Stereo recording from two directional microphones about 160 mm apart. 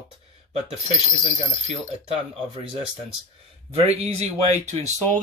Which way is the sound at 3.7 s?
40° right (ahead or behind).